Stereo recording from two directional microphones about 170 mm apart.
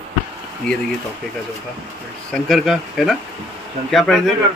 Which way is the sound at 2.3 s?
Centre (ahead or behind).